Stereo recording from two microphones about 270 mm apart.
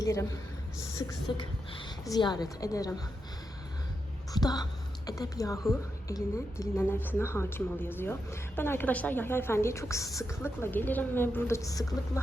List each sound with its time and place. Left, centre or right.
0.0 s a woman's voice: centre
4.3 s a woman's voice: centre